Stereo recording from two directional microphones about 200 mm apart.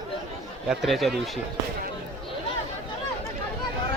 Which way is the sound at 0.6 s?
Centre (ahead or behind).